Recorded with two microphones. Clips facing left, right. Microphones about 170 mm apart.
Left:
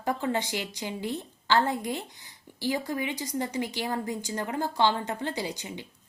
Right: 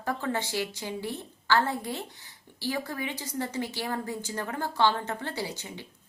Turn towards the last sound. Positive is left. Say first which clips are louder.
# left 2 dB
turn(degrees=15)  # may be behind; listen again after turning